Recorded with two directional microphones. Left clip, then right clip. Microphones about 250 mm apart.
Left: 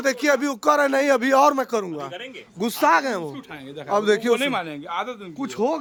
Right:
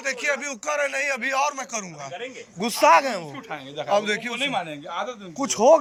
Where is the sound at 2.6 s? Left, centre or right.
Centre.